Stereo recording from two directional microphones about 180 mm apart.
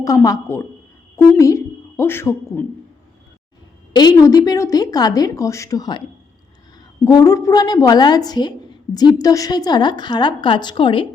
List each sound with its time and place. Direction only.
0.0 s a woman's voice: 20° left (ahead or behind)
3.9 s a woman's voice: 20° left (ahead or behind)
7.0 s a woman's voice: 20° left (ahead or behind)